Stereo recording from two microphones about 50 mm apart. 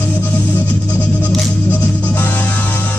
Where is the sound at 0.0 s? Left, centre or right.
Left.